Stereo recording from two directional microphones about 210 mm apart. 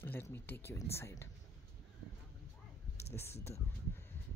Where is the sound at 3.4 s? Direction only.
10° left (ahead or behind).